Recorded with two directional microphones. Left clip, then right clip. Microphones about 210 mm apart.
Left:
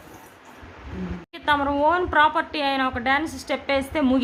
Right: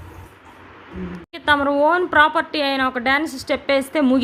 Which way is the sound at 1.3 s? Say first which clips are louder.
Right 4 dB; 15° right (ahead or behind).